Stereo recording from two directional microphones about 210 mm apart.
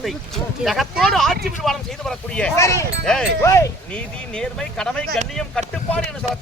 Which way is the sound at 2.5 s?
15° left (ahead or behind).